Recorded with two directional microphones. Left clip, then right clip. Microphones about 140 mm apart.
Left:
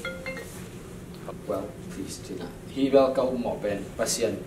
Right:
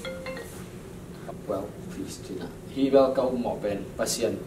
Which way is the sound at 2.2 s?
Centre (ahead or behind).